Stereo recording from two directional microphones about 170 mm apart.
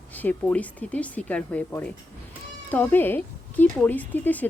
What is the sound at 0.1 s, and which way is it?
Speech, 10° left (ahead or behind).